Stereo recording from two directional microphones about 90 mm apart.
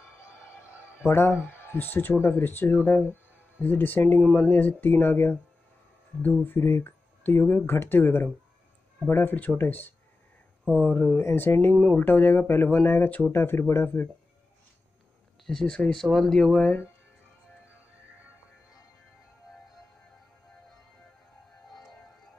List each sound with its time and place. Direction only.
1.0 s speech: 25° left (ahead or behind)
6.4 s speech: 25° left (ahead or behind)
15.4 s speech: 5° left (ahead or behind)